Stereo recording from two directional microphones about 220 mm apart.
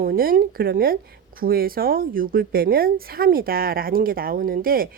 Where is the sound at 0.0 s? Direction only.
40° right (ahead or behind).